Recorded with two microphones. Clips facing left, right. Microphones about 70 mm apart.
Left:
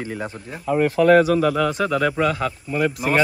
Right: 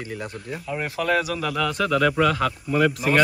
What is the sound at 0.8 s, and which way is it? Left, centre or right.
Speech, left.